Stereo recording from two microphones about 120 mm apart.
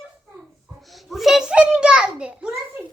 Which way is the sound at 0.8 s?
Centre (ahead or behind).